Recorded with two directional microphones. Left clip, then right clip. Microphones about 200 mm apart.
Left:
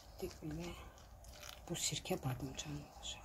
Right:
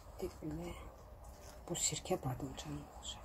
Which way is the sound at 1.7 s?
30° left (ahead or behind).